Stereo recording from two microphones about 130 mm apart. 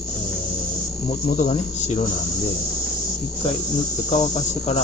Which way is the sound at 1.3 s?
60° left (ahead or behind).